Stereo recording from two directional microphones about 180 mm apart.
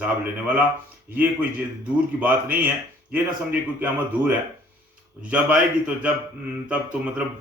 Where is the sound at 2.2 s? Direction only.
10° right (ahead or behind).